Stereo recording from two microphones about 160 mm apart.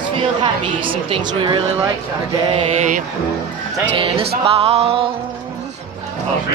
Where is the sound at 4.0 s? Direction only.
35° right (ahead or behind).